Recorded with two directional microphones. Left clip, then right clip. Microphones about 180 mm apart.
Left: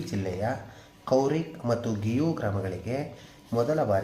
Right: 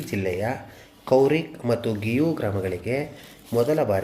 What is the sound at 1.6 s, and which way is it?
Speech, 25° right (ahead or behind).